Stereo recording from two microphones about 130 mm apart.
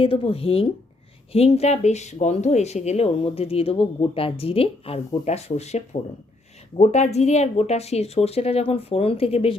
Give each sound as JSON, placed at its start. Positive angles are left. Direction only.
{"t": 0.0, "sound": "speech", "side_deg": 45}